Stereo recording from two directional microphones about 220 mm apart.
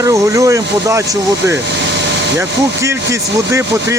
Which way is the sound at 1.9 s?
50° right (ahead or behind).